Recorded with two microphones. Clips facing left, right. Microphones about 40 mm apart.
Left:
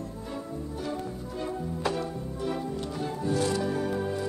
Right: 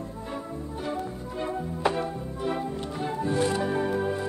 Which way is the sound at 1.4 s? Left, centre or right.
Right.